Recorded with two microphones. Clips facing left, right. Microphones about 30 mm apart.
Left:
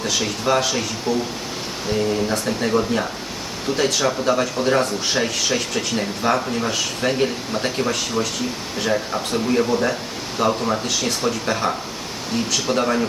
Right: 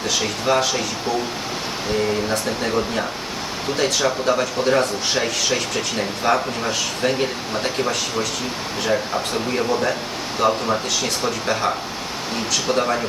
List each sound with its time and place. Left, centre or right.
0.0 s speech: centre
1.9 s speech: centre